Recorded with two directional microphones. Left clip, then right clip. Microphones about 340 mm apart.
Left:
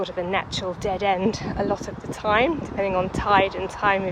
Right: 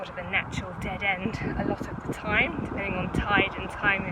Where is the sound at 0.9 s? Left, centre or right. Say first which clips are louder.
Left 6 dB; left.